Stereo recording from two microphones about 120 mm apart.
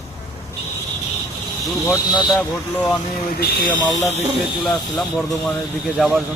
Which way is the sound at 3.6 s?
90° left.